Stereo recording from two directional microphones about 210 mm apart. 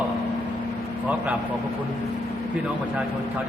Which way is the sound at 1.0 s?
5° right (ahead or behind).